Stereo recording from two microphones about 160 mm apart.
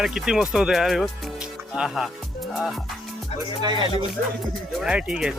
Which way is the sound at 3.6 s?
30° right (ahead or behind).